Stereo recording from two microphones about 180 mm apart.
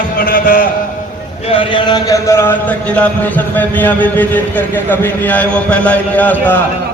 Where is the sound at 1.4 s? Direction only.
30° left (ahead or behind); by 6.6 s 10° left (ahead or behind).